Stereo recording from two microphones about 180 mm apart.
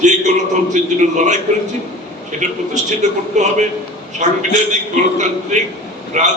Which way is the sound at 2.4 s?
40° right (ahead or behind).